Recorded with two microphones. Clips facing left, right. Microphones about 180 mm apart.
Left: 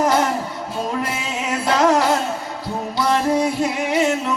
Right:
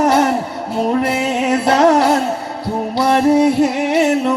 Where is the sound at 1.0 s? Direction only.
65° right (ahead or behind).